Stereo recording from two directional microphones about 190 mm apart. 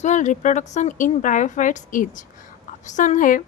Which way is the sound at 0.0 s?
40° left (ahead or behind).